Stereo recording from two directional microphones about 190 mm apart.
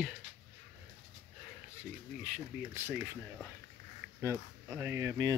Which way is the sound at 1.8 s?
5° right (ahead or behind).